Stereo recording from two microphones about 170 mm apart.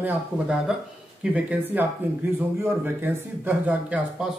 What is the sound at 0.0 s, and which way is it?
Speech, 5° right (ahead or behind).